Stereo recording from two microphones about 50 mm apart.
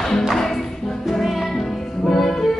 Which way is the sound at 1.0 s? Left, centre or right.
Centre.